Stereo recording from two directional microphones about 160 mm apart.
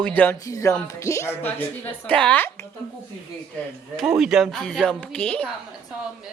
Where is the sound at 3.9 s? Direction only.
5° right (ahead or behind).